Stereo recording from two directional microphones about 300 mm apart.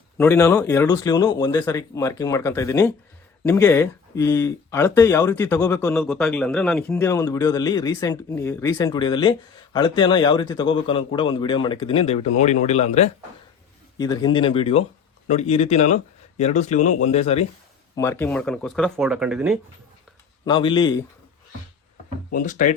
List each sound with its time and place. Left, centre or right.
0.2 s speech: centre
17.9 s speech: centre
20.4 s speech: centre
22.3 s speech: left